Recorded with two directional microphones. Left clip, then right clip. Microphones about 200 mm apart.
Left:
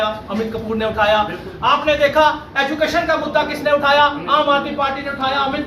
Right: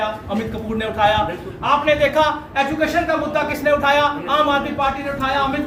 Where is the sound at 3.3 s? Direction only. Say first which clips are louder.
Left 1 dB; 5° right (ahead or behind).